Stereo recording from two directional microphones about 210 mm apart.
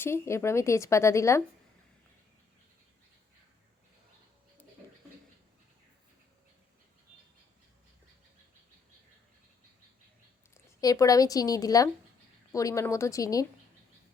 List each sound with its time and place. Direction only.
0.0 s a woman's voice: 10° left (ahead or behind)
10.8 s a woman's voice: 15° left (ahead or behind)